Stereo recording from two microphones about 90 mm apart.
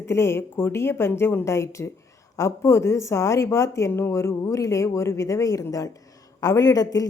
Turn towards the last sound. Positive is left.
turn(degrees=45)  # may be behind; listen again after turning